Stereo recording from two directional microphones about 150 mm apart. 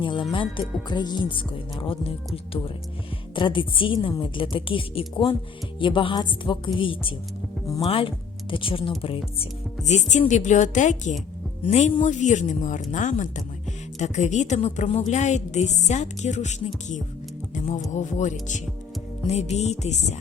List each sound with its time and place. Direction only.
0.0 s speech: 35° left (ahead or behind); by 16.6 s 50° left (ahead or behind)
17.5 s music: 55° left (ahead or behind)
17.9 s speech: 55° left (ahead or behind)